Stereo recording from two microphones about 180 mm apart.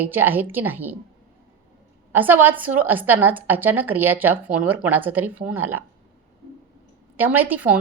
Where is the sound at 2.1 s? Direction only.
10° right (ahead or behind).